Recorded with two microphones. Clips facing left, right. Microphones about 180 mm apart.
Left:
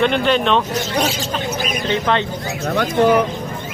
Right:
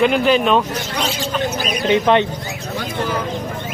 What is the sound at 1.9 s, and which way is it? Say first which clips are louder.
Speech: right 5 dB; 20° right (ahead or behind).